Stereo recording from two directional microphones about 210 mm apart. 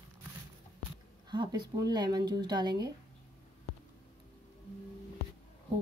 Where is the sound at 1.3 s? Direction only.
20° right (ahead or behind).